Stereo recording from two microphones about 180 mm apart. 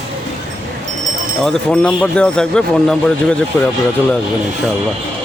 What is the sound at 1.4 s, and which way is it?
A man's voice, 5° left (ahead or behind).